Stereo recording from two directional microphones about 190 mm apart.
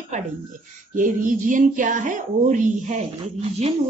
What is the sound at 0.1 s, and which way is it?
A woman's voice, 40° right (ahead or behind).